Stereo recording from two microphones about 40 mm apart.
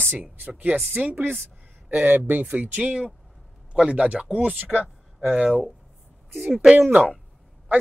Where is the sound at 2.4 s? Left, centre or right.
Right.